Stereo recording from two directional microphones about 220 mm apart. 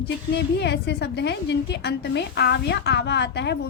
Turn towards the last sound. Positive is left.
turn(degrees=50)  # may be behind; listen again after turning